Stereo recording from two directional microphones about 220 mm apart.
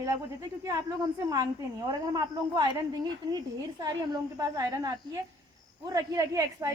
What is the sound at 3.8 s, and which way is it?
A woman's voice, 15° right (ahead or behind).